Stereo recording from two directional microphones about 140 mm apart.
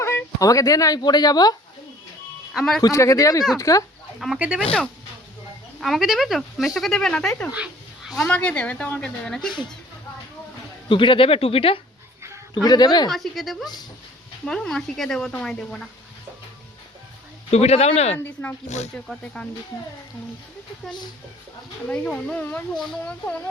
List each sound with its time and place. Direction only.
0.0 s speech: 15° left (ahead or behind)
2.5 s speech: centre (ahead or behind)
2.8 s speech: 20° left (ahead or behind)
4.2 s speech: 5° right (ahead or behind)
5.8 s speech: centre (ahead or behind)
7.5 s speech: 5° right (ahead or behind)
10.8 s speech: 35° left (ahead or behind)
12.6 s speech: 30° left (ahead or behind)
13.1 s speech: centre (ahead or behind)
17.5 s speech: 50° left (ahead or behind)
19.0 s speech: 5° left (ahead or behind)
21.8 s speech: 10° left (ahead or behind)